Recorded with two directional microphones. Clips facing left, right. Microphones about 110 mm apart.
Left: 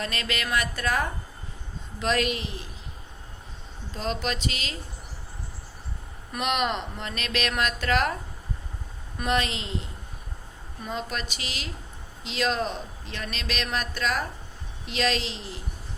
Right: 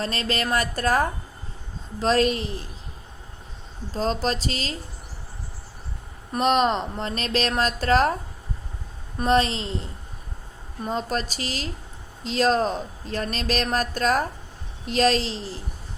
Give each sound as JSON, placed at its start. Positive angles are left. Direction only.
{"t": 0.0, "sound": "a man's voice", "side_deg": -35}
{"t": 3.9, "sound": "a man's voice", "side_deg": -35}
{"t": 6.3, "sound": "a man's voice", "side_deg": -35}
{"t": 9.1, "sound": "a man's voice", "side_deg": -35}
{"t": 10.8, "sound": "a man's voice", "side_deg": -35}